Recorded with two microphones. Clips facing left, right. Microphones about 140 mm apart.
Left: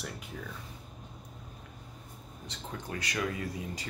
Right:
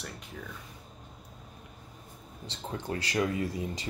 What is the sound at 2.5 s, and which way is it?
Speech, 30° right (ahead or behind).